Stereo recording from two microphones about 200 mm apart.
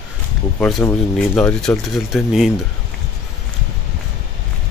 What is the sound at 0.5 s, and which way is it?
Speech, 5° left (ahead or behind).